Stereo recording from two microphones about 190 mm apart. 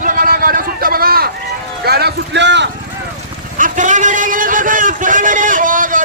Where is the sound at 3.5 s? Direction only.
45° right (ahead or behind).